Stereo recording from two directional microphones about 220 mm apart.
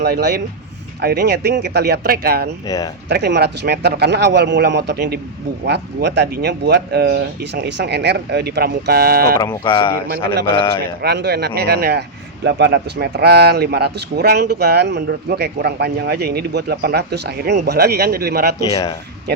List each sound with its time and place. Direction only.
0.0 s speech: 50° right (ahead or behind)
2.6 s speech: 15° left (ahead or behind)
3.1 s speech: 50° right (ahead or behind)
9.4 s speech: 15° left (ahead or behind)
11.0 s speech: 50° right (ahead or behind)
18.6 s speech: 20° left (ahead or behind)